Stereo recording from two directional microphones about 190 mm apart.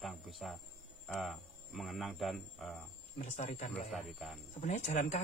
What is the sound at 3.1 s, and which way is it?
Speech, 40° left (ahead or behind).